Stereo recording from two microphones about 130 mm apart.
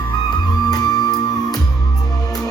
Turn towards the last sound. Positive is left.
turn(degrees=30)  # may be behind; listen again after turning